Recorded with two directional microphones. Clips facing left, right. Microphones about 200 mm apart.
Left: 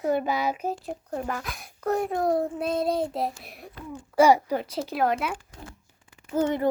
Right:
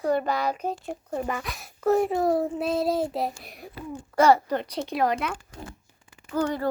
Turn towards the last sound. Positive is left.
turn(degrees=20)  # may be behind; listen again after turning